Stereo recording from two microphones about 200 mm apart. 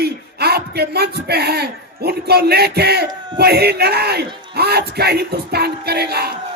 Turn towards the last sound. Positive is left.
turn(degrees=-55)  # may be behind; listen again after turning